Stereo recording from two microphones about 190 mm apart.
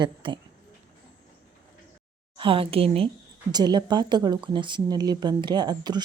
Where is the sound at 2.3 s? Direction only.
30° right (ahead or behind).